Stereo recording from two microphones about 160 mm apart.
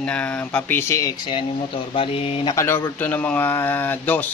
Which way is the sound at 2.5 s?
15° left (ahead or behind).